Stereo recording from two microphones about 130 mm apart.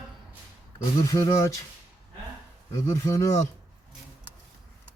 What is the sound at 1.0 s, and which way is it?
Speech, 25° left (ahead or behind).